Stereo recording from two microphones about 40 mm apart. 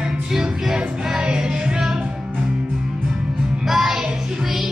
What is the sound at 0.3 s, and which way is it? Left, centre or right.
Music, centre.